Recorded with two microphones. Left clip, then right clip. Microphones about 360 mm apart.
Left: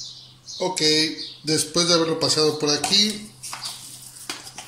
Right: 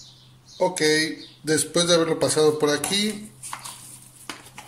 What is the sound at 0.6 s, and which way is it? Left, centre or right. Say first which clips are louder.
Speech: even; right.